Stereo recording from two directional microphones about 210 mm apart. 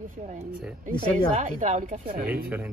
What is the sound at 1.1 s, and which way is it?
Speech, 35° right (ahead or behind).